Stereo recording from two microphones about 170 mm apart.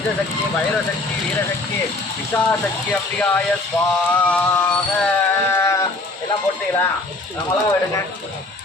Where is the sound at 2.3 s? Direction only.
10° left (ahead or behind).